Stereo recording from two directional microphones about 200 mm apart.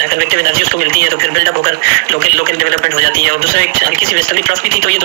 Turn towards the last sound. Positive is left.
turn(degrees=-45)  # may be behind; listen again after turning